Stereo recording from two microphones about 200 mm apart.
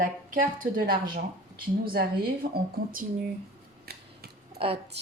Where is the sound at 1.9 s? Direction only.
50° right (ahead or behind).